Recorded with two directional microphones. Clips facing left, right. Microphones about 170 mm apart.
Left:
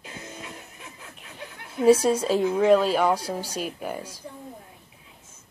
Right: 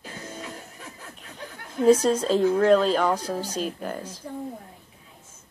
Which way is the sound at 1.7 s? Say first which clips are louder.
Even; 10° left (ahead or behind).